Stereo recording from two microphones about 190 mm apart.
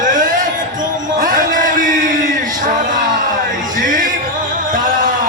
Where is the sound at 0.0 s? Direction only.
45° right (ahead or behind).